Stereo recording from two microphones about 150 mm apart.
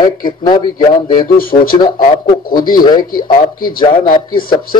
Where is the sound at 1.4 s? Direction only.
70° left (ahead or behind).